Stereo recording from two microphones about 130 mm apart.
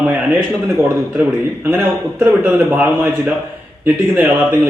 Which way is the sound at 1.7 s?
15° right (ahead or behind).